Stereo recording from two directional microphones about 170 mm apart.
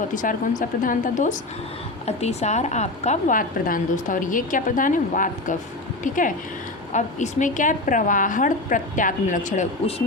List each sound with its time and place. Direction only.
0.1 s a woman's voice: 50° left (ahead or behind)